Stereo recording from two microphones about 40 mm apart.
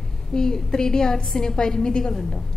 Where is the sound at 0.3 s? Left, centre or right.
Centre.